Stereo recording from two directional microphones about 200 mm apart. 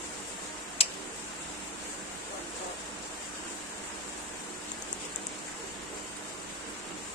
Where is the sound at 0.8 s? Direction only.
30° left (ahead or behind).